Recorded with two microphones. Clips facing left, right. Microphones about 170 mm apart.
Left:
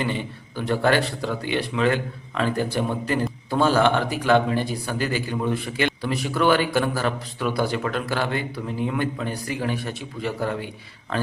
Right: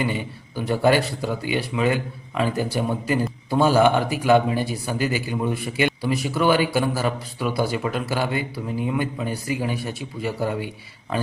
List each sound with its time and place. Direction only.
0.0 s a man's voice: 10° right (ahead or behind)